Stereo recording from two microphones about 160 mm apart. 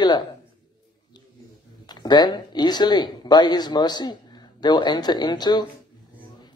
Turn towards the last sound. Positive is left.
turn(degrees=25)  # may be behind; listen again after turning